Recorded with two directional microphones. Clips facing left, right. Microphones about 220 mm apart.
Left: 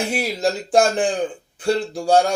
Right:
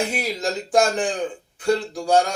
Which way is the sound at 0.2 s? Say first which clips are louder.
Left 4 dB; 30° left (ahead or behind).